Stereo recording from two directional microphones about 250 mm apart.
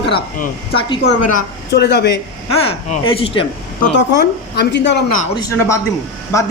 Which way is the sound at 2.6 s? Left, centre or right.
Left.